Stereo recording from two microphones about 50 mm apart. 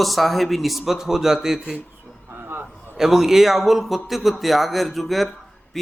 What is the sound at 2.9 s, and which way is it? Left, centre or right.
Speech, centre.